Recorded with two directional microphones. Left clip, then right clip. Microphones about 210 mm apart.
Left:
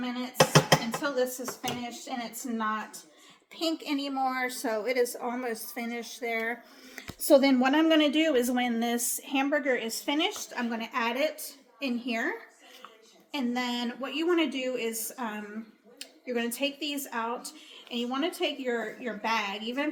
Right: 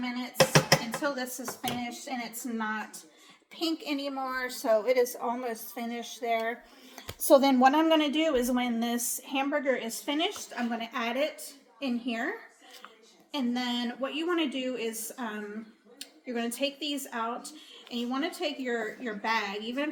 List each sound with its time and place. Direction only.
0.3 s a sound: 10° right (ahead or behind)
1.0 s a woman's voice: 10° left (ahead or behind)
7.3 s a woman's voice: 10° left (ahead or behind)
13.7 s a woman's voice: 15° left (ahead or behind)